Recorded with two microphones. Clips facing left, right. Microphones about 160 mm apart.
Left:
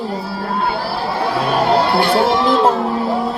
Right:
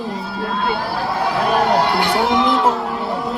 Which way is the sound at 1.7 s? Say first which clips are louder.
Left 3 dB; 20° right (ahead or behind).